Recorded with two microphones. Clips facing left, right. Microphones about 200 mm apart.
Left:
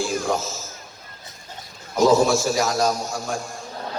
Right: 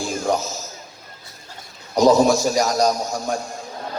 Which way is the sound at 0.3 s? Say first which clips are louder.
Right 2 dB; 20° right (ahead or behind).